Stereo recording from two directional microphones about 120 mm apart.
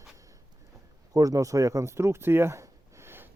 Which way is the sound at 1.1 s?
30° right (ahead or behind).